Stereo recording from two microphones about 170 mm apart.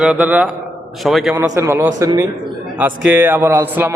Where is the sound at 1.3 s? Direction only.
20° right (ahead or behind).